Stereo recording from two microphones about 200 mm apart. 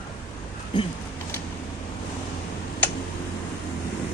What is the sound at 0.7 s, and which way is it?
Speech, 25° left (ahead or behind).